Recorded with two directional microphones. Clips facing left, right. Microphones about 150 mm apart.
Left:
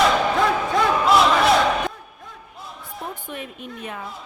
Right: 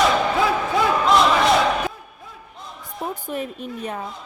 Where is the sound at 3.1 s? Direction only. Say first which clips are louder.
Right 6 dB; 40° right (ahead or behind).